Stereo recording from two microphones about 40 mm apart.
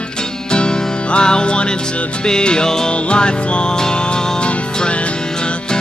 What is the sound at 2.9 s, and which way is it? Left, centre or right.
Music, left.